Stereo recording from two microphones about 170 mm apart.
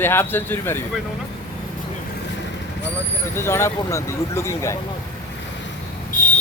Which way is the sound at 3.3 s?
15° left (ahead or behind).